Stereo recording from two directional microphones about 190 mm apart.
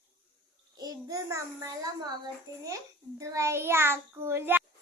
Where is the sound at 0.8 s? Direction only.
20° right (ahead or behind).